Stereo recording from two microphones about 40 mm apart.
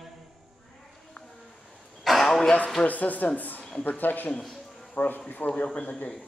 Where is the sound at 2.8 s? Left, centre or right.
Left.